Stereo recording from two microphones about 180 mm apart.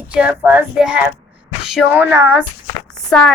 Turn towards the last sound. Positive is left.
turn(degrees=5)  # may be behind; listen again after turning